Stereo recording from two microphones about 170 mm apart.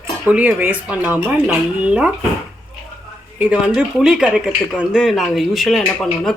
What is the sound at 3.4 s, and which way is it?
Speech, 5° right (ahead or behind).